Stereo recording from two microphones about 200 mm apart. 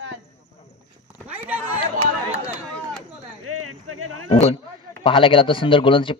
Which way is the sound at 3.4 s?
90° right.